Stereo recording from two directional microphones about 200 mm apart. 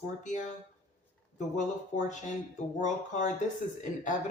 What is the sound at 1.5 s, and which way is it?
Speech, 35° left (ahead or behind).